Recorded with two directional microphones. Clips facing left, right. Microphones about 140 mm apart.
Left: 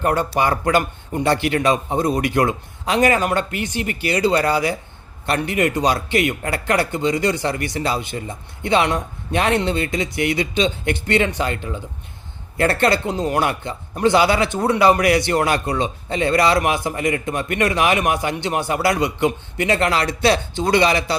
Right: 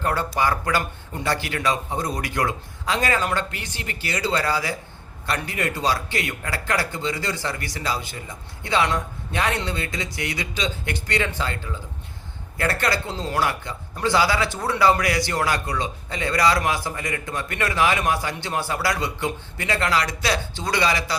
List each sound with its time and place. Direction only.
0.0 s a man's voice: 20° left (ahead or behind)